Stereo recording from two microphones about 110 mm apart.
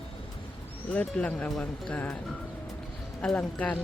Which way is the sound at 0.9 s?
15° left (ahead or behind).